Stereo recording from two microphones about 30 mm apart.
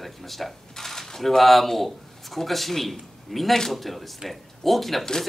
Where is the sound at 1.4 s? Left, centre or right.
Centre.